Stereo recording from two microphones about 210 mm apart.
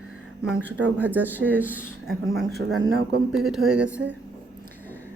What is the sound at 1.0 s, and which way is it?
Speech, 10° right (ahead or behind).